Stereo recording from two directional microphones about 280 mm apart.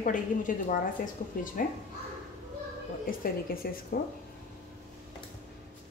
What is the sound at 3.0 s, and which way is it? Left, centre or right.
A woman's voice, left.